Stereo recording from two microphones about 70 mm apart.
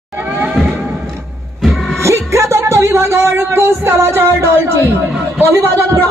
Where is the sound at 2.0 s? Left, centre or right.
Right.